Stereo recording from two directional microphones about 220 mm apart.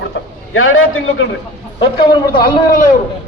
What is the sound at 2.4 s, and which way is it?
Speech, 40° left (ahead or behind).